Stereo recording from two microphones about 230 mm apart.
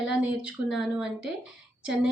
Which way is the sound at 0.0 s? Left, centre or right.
Centre.